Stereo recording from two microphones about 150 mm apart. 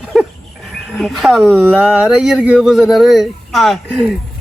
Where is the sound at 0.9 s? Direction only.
Centre (ahead or behind).